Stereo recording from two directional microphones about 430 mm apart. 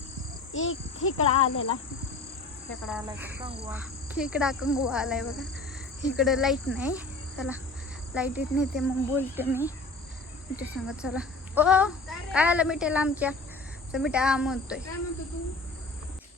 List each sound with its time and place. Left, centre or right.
0.5 s speech: left
2.8 s speech: centre
6.7 s insect: centre
8.1 s speech: centre